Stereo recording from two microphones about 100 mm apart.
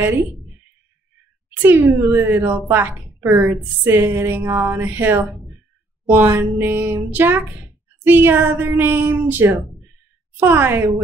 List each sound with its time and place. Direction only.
1.6 s speech: 20° right (ahead or behind)